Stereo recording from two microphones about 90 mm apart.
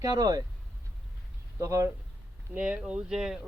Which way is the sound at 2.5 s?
10° right (ahead or behind).